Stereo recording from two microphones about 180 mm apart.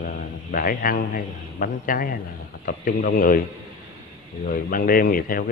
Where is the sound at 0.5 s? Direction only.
50° left (ahead or behind).